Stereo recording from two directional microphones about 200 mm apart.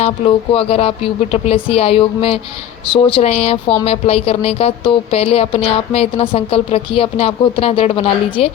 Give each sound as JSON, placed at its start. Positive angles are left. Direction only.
{"t": 0.5, "sound": "a woman's voice", "side_deg": 30}